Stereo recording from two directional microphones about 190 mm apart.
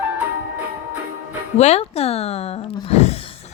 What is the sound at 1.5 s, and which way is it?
Speech, 35° left (ahead or behind).